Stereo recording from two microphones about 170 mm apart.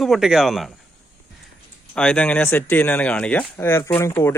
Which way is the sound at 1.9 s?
5° left (ahead or behind).